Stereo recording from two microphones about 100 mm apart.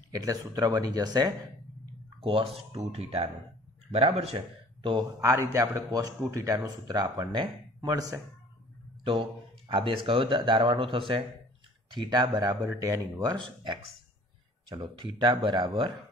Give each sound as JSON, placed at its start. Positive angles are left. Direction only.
{"t": 0.1, "sound": "a man's voice", "side_deg": -35}
{"t": 2.1, "sound": "speech", "side_deg": -70}
{"t": 2.7, "sound": "speech", "side_deg": -80}
{"t": 5.2, "sound": "a man's voice", "side_deg": -30}
{"t": 9.0, "sound": "speech", "side_deg": -60}
{"t": 11.9, "sound": "speech", "side_deg": -50}
{"t": 12.4, "sound": "a man's voice", "side_deg": -30}
{"t": 14.7, "sound": "speech", "side_deg": -55}